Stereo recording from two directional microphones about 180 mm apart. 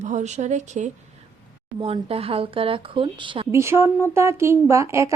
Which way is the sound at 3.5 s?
15° right (ahead or behind).